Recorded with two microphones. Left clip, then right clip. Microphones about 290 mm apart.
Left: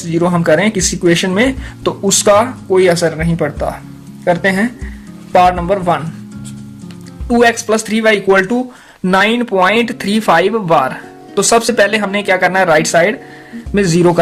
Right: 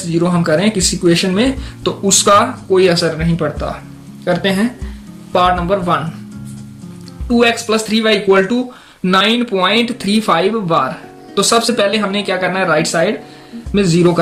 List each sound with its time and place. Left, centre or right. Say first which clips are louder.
0.1 s speech: left 3 dB; left
7.3 s speech: left 2 dB; left